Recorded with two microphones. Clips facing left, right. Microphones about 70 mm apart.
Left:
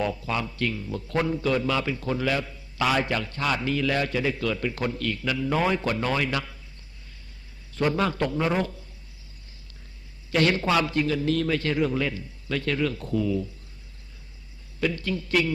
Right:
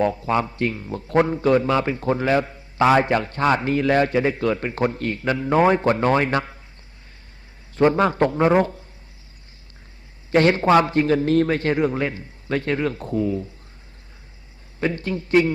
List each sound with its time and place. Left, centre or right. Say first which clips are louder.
0.0 s a man's voice: right 7 dB; right
7.8 s a man's voice: right 7 dB; right
10.3 s a man's voice: right 7 dB; right
14.8 s a man's voice: right 3 dB; right